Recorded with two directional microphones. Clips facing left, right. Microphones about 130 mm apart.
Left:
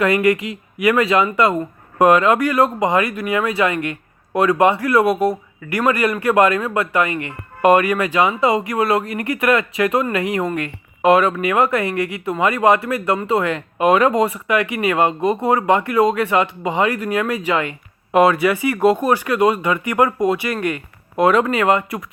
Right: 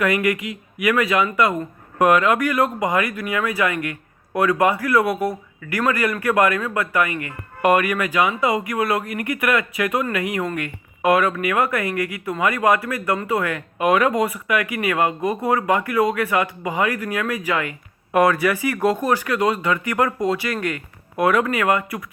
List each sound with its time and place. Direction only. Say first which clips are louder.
0.0 s speech: left 4 dB; 30° left (ahead or behind)